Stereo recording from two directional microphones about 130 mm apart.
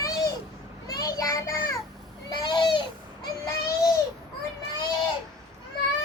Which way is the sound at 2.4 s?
35° left (ahead or behind).